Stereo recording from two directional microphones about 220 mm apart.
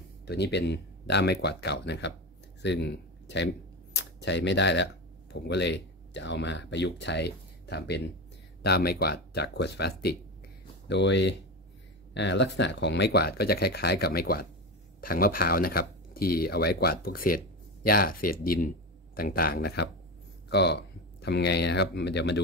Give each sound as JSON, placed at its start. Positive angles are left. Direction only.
{"t": 0.2, "sound": "speech", "side_deg": 50}
{"t": 3.9, "sound": "a sound", "side_deg": 50}
{"t": 5.3, "sound": "speech", "side_deg": 50}